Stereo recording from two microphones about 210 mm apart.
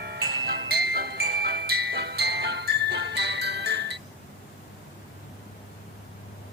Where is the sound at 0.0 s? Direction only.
50° right (ahead or behind).